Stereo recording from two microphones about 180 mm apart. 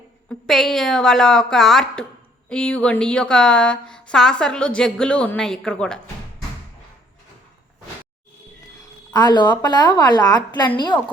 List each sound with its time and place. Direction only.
0.3 s speech: centre (ahead or behind)
9.1 s a woman's voice: 25° left (ahead or behind)